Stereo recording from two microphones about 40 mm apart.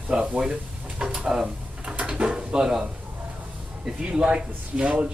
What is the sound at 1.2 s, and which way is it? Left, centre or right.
Speech, centre.